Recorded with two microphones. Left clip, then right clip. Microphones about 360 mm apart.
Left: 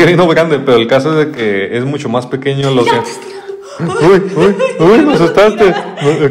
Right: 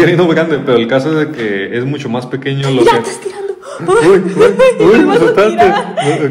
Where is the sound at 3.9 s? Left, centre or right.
Centre.